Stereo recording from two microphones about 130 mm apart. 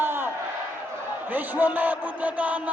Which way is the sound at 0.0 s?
15° right (ahead or behind).